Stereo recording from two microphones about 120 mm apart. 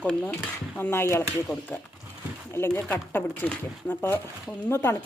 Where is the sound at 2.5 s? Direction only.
20° left (ahead or behind).